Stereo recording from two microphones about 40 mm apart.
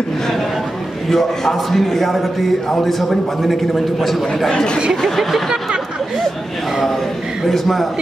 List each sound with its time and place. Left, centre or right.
1.0 s a man's voice: centre
4.5 s speech: left
5.0 s a man's voice: centre
7.4 s a man's voice: centre